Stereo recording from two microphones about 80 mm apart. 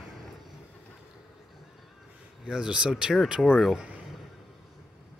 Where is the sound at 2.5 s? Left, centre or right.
Centre.